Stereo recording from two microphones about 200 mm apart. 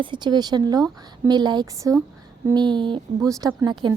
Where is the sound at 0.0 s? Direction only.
20° right (ahead or behind).